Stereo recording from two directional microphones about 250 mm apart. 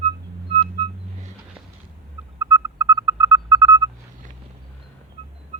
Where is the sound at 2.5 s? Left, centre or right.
Centre.